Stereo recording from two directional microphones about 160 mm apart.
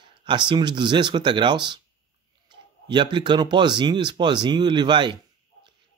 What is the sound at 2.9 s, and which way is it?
Speech, 30° right (ahead or behind).